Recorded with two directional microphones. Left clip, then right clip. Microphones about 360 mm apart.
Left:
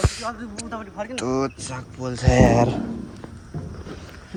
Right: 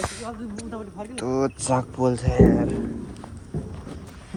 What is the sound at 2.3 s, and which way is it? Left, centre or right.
Speech, left.